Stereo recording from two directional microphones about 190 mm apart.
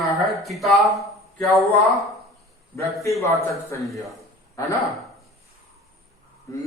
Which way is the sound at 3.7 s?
15° left (ahead or behind).